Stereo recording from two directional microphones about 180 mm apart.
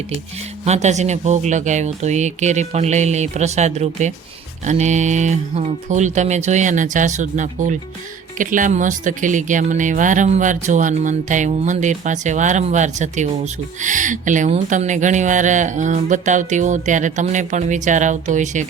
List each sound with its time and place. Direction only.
0.6 s speech: 40° right (ahead or behind)